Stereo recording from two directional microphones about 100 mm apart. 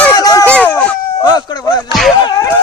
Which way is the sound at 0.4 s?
15° left (ahead or behind).